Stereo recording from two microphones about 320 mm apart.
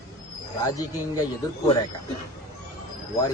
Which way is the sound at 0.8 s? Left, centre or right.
Centre.